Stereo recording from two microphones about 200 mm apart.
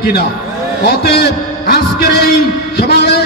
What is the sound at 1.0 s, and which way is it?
A man's voice, 55° left (ahead or behind).